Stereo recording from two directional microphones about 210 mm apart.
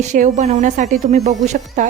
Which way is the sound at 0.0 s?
35° right (ahead or behind).